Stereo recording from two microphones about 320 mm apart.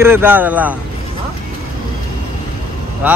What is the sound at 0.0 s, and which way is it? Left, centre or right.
Speech, centre.